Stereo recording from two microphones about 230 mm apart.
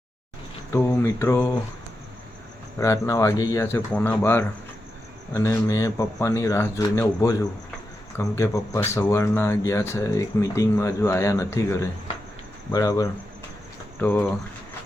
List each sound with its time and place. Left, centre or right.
0.7 s speech: centre
2.7 s speech: centre